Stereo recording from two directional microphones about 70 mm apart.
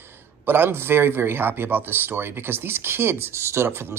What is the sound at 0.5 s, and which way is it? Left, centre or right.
Speech, right.